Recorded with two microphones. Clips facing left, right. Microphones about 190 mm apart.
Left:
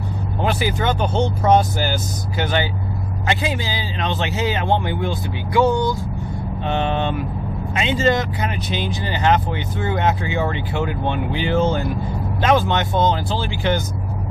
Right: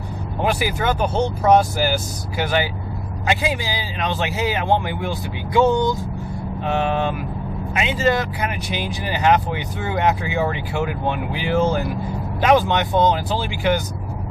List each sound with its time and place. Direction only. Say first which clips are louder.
0.4 s speech: even; 10° right (ahead or behind)
5.6 s speech: right 1 dB; 20° right (ahead or behind)
6.6 s speech: right 1 dB; 5° right (ahead or behind)